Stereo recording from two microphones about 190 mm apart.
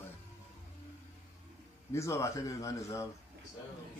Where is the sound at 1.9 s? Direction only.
15° left (ahead or behind).